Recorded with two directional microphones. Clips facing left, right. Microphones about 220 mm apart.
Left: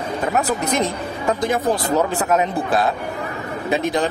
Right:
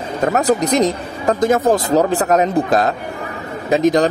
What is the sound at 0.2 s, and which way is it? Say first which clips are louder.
A man's voice: right 7 dB; 40° right (ahead or behind).